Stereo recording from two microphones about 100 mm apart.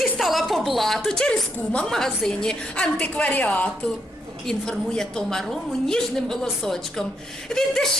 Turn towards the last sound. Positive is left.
turn(degrees=5)  # may be behind; listen again after turning